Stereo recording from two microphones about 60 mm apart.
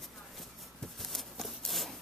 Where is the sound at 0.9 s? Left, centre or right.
Centre.